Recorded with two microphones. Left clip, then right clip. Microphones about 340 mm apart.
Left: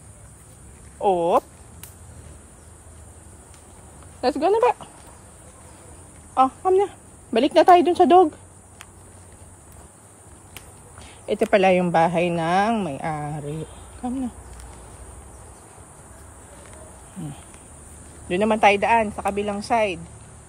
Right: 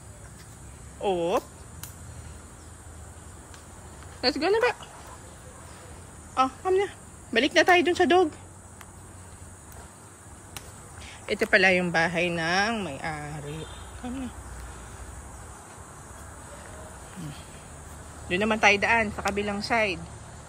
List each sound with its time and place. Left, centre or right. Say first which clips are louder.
1.0 s a woman's voice: left 7 dB; centre
4.2 s a woman's voice: left 5 dB; centre
6.3 s a woman's voice: left 6 dB; centre
11.3 s a woman's voice: left 3 dB; centre
18.3 s a woman's voice: left 4 dB; centre